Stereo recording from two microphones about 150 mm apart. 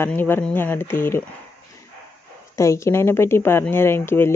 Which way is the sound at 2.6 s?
20° left (ahead or behind).